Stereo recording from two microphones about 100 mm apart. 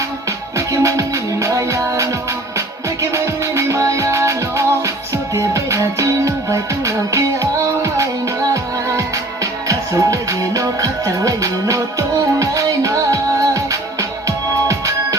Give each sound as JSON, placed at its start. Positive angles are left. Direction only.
{"t": 0.5, "sound": "music", "side_deg": -30}